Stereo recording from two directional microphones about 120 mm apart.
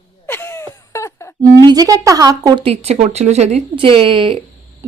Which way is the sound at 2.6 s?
60° right (ahead or behind).